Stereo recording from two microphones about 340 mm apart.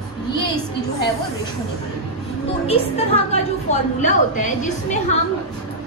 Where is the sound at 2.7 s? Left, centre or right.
Centre.